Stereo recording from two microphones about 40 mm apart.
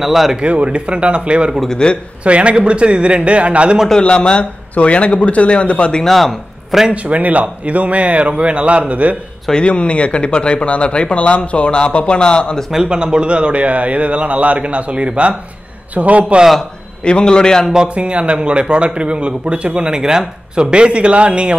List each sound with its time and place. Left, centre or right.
0.0 s speech: centre
0.4 s a man's voice: right
1.7 s speech: left
2.2 s a man's voice: right
4.0 s speech: left
6.0 s speech: centre
6.9 s a man's voice: right
9.5 s speech: left
12.8 s a man's voice: right
17.0 s speech: left
17.8 s a man's voice: right